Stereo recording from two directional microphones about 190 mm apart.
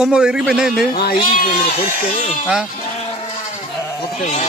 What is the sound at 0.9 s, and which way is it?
Speech, 55° left (ahead or behind).